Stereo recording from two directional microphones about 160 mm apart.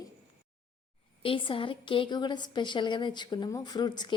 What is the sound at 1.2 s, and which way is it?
A woman's voice, 35° left (ahead or behind).